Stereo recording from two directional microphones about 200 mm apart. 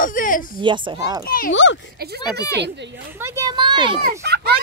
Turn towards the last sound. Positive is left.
turn(degrees=-55)  # may be behind; listen again after turning